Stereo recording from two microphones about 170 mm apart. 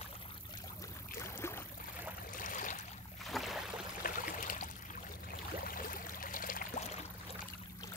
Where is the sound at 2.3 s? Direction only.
50° left (ahead or behind).